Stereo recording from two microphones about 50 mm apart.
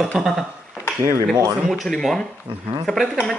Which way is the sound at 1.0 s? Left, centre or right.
Right.